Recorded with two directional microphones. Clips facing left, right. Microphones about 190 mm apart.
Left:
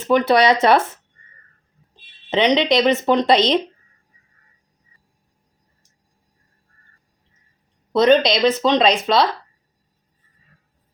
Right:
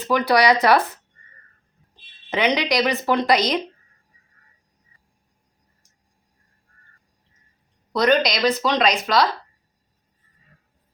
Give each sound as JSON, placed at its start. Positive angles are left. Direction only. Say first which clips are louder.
{"t": 0.0, "sound": "a woman's voice", "louder": "left 3 dB", "side_deg": 25}
{"t": 2.3, "sound": "a woman's voice", "louder": "left 4 dB", "side_deg": 20}
{"t": 7.9, "sound": "a woman's voice", "louder": "left 5 dB", "side_deg": 25}